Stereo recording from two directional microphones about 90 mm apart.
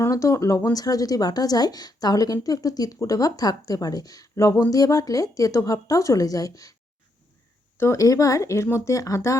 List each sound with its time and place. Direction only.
0.0 s a woman's voice: 35° left (ahead or behind)
7.8 s a woman's voice: 35° left (ahead or behind)